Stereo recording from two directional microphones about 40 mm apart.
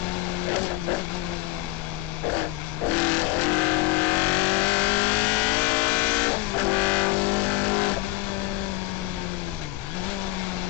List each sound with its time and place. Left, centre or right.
2.9 s vehicle: left